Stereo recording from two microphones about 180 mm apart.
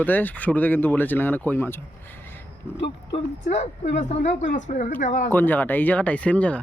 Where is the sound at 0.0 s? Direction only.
10° left (ahead or behind).